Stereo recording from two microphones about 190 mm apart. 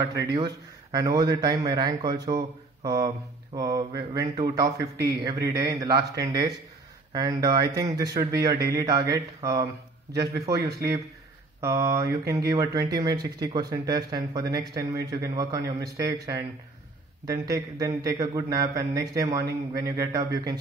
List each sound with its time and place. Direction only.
0.2 s speech: 20° right (ahead or behind)
4.9 s a man's voice: 55° right (ahead or behind)
5.2 s speech: 20° right (ahead or behind)
11.6 s speech: 15° right (ahead or behind)